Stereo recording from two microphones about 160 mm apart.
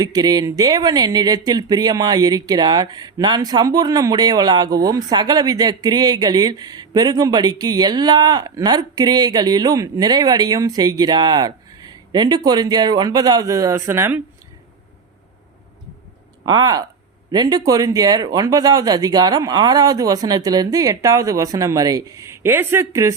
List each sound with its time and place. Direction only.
0.0 s speech: 25° right (ahead or behind)
16.5 s speech: 25° right (ahead or behind)